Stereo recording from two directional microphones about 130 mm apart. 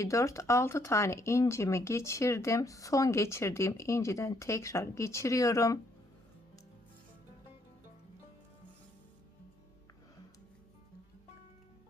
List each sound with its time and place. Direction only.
0.0 s speech: 25° left (ahead or behind)